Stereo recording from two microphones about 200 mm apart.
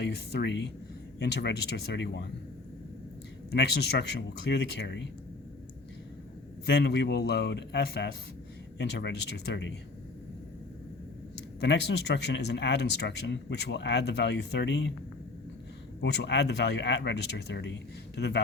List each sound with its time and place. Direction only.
0.0 s speech: 55° left (ahead or behind)
3.5 s speech: 55° left (ahead or behind)
6.7 s speech: 55° left (ahead or behind)
11.6 s speech: 55° left (ahead or behind)
16.0 s speech: 60° left (ahead or behind)